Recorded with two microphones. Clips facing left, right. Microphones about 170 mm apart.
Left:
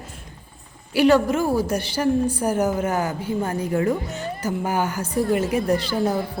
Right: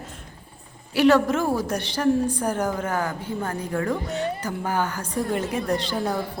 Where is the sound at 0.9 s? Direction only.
Centre (ahead or behind).